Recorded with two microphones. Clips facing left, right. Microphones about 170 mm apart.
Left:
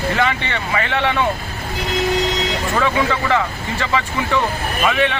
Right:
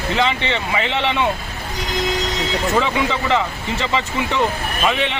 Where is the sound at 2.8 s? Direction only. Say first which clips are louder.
Left 3 dB; 20° right (ahead or behind).